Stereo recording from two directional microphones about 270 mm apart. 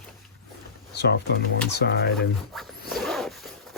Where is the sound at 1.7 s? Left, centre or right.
Left.